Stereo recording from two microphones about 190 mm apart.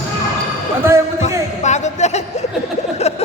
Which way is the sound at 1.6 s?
35° left (ahead or behind).